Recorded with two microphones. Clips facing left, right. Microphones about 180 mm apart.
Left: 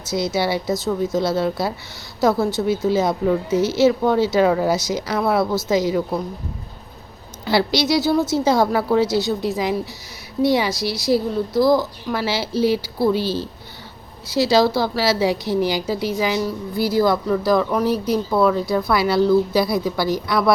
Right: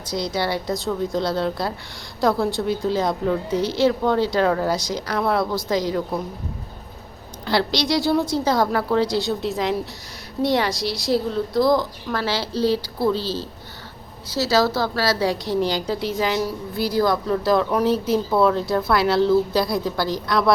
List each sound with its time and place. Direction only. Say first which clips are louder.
0.1 s a woman's voice: left 3 dB; 5° left (ahead or behind)
7.4 s a woman's voice: left 3 dB; 5° left (ahead or behind)